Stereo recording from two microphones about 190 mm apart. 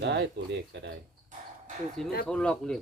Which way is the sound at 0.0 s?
65° right (ahead or behind).